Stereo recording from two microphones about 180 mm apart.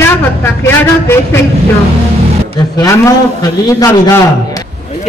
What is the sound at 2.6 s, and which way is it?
A man's voice, 20° left (ahead or behind).